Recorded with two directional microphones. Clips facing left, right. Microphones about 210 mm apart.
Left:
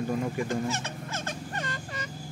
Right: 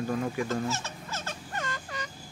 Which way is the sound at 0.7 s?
55° left (ahead or behind).